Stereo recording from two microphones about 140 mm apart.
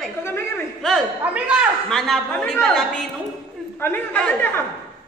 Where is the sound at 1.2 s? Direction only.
10° right (ahead or behind).